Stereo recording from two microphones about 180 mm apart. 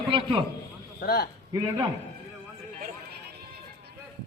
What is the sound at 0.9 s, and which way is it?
Speech, 60° left (ahead or behind).